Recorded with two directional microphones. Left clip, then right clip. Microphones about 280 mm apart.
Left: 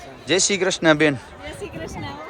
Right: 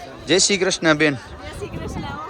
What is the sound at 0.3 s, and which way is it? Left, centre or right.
Speech, centre.